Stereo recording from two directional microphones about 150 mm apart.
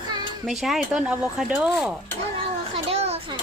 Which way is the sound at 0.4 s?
Centre (ahead or behind).